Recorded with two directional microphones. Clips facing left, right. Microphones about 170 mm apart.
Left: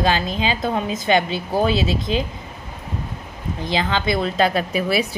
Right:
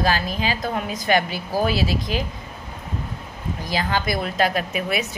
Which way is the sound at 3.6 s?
25° left (ahead or behind).